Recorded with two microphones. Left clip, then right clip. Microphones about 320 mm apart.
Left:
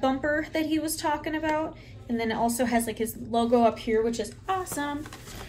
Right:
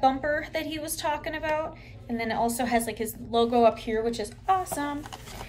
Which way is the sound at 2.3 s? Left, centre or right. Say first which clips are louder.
Right 1 dB; right.